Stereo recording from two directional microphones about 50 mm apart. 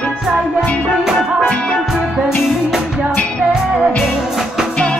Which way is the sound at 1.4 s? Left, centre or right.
Left.